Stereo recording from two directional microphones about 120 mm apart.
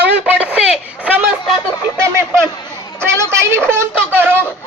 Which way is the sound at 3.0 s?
20° right (ahead or behind).